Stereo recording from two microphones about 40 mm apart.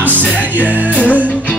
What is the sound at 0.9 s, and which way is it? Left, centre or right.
Speech, left.